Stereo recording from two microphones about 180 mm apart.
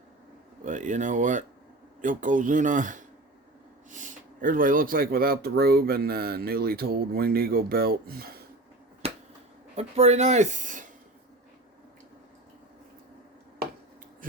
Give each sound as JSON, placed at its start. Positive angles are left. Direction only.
{"t": 0.6, "sound": "speech", "side_deg": -45}
{"t": 9.7, "sound": "speech", "side_deg": -35}